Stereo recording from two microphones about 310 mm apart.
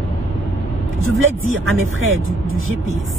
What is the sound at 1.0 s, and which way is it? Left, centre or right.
Speech, right.